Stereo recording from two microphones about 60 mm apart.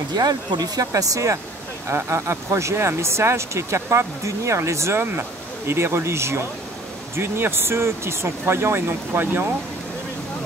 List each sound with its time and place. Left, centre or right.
0.2 s speech: right
2.0 s speech: right
9.1 s speech: right